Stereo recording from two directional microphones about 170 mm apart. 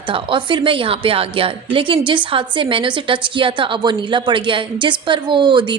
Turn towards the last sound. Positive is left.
turn(degrees=-25)  # may be behind; listen again after turning